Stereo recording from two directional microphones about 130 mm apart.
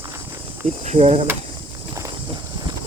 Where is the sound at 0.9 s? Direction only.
55° right (ahead or behind).